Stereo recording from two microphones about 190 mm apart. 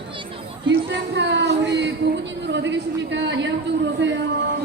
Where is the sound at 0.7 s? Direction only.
70° right (ahead or behind).